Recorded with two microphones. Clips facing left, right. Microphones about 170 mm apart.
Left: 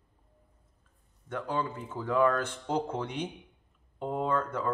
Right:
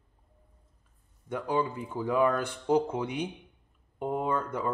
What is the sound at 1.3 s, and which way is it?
Speech, 15° right (ahead or behind).